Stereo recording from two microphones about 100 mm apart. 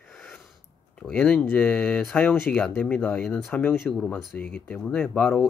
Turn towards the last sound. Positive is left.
turn(degrees=10)  # may be behind; listen again after turning